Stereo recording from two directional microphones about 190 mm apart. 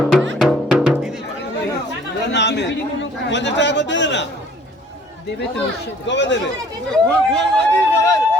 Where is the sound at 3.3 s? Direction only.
70° left (ahead or behind).